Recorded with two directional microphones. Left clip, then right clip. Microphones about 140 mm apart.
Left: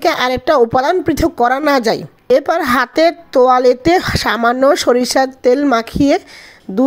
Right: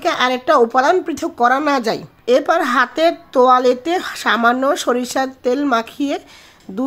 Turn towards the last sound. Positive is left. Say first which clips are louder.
# left 5 dB
turn(degrees=40)  # may be behind; listen again after turning